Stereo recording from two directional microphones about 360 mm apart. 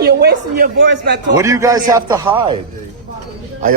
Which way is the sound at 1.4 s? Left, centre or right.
Centre.